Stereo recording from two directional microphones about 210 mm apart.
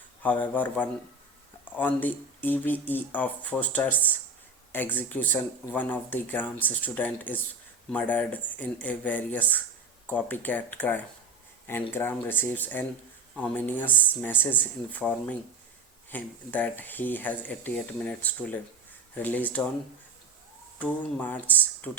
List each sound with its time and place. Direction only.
0.2 s speech: 10° left (ahead or behind)
20.7 s speech: 5° left (ahead or behind)